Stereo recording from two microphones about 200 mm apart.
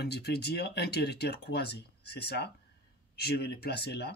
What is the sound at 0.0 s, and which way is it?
Speech, 55° left (ahead or behind).